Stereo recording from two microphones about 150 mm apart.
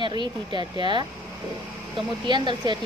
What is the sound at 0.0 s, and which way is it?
A woman's voice, 30° right (ahead or behind).